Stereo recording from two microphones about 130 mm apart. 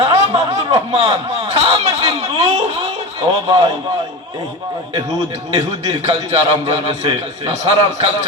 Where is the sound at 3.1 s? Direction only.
35° right (ahead or behind).